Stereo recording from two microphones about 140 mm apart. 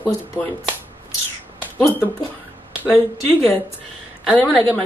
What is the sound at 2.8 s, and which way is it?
Speech, 15° left (ahead or behind).